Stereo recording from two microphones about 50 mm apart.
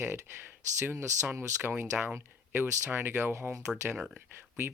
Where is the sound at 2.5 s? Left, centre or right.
Right.